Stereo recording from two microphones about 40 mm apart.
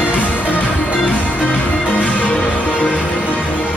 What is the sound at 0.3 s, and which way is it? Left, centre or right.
Music, left.